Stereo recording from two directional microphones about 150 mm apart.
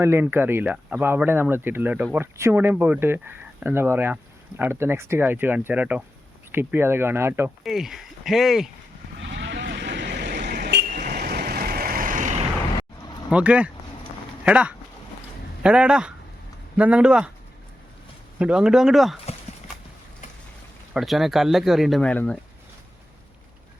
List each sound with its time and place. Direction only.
0.0 s speech: 15° right (ahead or behind)
7.6 s speech: 5° right (ahead or behind)
9.6 s vehicle: 90° right; by 12.5 s 55° right (ahead or behind)
13.3 s speech: 10° right (ahead or behind)
18.3 s speech: 5° right (ahead or behind)
19.2 s clip-clop: 45° left (ahead or behind)
20.9 s speech: centre (ahead or behind)